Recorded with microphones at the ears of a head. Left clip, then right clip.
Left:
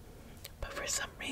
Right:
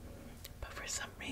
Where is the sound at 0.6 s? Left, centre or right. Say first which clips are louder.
Left 6 dB; left.